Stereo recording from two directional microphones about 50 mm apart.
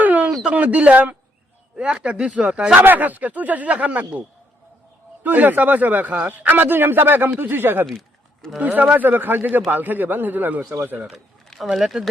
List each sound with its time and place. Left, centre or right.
0.0 s a sound: right
0.4 s speech: right
2.8 s a man's voice: right
5.2 s a man's voice: right
7.9 s a sound: centre
8.5 s a man's voice: right
11.7 s speech: centre